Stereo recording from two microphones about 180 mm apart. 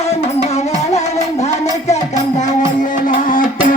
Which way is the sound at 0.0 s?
35° left (ahead or behind).